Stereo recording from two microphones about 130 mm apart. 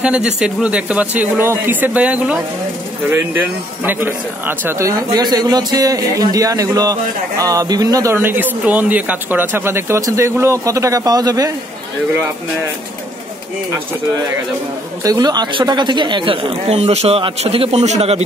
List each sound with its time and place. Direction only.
0.0 s speech: 10° right (ahead or behind); by 11.5 s 30° right (ahead or behind)
15.0 s speech: 30° right (ahead or behind); by 18.2 s 55° right (ahead or behind)